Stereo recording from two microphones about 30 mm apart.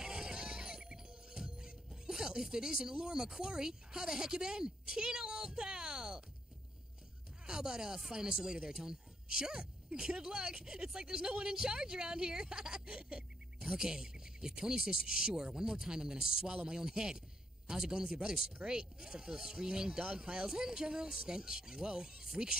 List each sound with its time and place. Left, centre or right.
0.0 s music: right
1.9 s speech: centre
7.4 s a woman's voice: right
13.6 s a woman's voice: centre